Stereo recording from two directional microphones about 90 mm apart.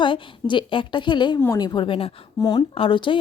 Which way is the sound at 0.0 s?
65° left (ahead or behind).